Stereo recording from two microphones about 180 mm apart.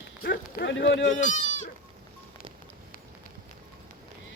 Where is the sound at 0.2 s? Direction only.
65° left (ahead or behind); by 1.3 s 90° left.